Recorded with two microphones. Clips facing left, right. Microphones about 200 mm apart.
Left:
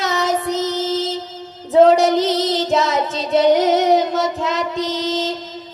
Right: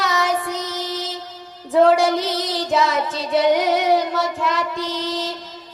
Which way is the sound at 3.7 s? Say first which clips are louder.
Left 3 dB; 20° left (ahead or behind).